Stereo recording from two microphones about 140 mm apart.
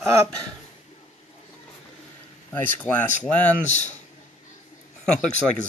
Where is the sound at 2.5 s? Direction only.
15° left (ahead or behind).